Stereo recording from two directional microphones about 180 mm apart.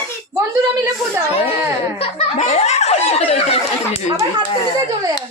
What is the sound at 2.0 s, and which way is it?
Speech, 35° left (ahead or behind).